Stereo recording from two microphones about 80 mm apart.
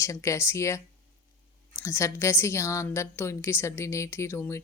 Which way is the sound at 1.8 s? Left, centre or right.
Left.